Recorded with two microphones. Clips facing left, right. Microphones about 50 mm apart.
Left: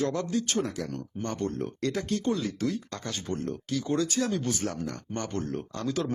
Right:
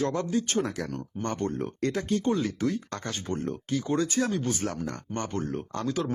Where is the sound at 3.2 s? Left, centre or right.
Right.